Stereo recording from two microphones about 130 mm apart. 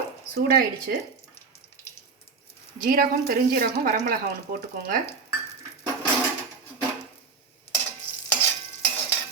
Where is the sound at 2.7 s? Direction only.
90° right.